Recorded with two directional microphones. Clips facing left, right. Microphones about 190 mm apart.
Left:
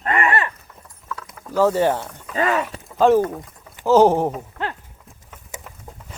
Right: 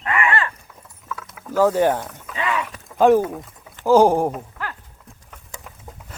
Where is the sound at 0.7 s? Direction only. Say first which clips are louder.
Even; centre (ahead or behind).